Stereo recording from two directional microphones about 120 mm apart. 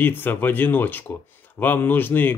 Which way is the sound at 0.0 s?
15° left (ahead or behind).